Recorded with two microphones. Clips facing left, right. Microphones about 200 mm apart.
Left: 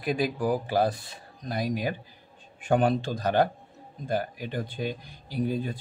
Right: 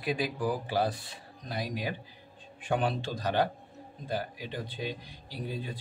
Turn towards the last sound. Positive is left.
turn(degrees=50)  # may be behind; listen again after turning